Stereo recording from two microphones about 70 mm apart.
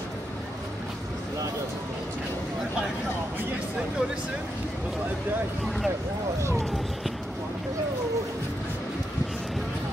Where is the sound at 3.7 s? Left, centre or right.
Centre.